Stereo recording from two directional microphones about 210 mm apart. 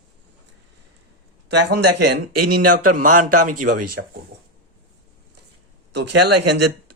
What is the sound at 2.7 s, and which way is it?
Speech, 40° right (ahead or behind).